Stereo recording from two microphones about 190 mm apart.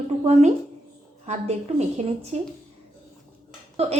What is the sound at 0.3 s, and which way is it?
A woman's voice, 35° right (ahead or behind).